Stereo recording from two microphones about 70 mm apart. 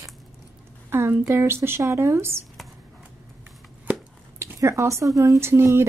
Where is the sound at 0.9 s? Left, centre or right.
Right.